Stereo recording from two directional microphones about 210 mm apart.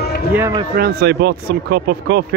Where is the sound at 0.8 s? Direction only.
50° right (ahead or behind).